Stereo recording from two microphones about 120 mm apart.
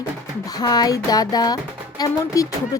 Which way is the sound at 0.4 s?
35° left (ahead or behind).